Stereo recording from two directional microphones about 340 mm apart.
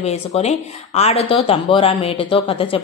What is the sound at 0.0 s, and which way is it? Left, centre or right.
Speech, centre.